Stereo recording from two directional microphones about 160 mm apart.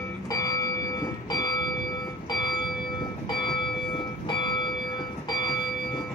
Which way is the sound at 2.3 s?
25° left (ahead or behind).